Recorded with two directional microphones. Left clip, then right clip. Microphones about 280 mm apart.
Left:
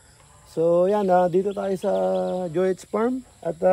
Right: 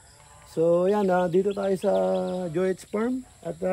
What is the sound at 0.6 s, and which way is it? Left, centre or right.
Speech, centre.